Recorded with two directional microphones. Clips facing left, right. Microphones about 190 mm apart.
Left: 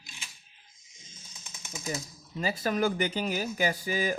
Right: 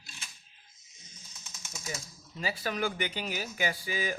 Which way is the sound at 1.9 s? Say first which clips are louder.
Left 6 dB; 40° left (ahead or behind).